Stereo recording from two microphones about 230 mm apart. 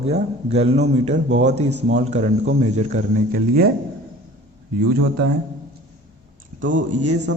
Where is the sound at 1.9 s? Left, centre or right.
Right.